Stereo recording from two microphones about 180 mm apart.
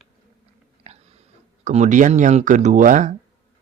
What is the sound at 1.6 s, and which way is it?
Speech, 40° right (ahead or behind).